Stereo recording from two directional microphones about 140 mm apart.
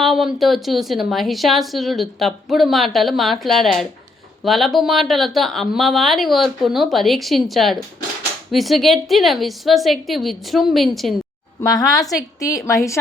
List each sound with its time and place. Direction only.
0.0 s a woman's voice: centre (ahead or behind)
11.6 s a woman's voice: 25° left (ahead or behind)